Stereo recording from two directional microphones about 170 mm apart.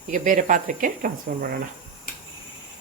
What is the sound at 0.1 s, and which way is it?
Speech, 50° right (ahead or behind).